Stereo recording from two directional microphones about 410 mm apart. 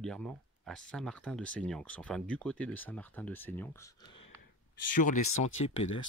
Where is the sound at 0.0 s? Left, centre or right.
Centre.